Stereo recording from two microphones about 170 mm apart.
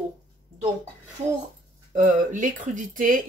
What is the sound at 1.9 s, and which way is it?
Speech, 50° right (ahead or behind).